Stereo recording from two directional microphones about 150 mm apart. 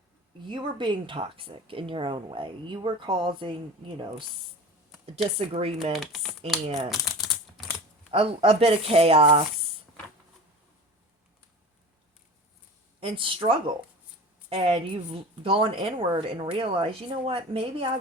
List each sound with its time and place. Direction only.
0.4 s a woman's voice: 30° right (ahead or behind)
5.4 s a woman's voice: 40° right (ahead or behind)
5.9 s speech: centre (ahead or behind)
7.0 s typing: centre (ahead or behind)
8.1 s a woman's voice: 40° right (ahead or behind)
13.0 s a woman's voice: 35° right (ahead or behind)